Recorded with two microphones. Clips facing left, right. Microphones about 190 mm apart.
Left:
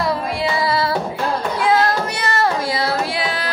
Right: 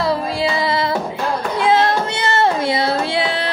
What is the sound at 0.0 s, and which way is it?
Music, 25° right (ahead or behind).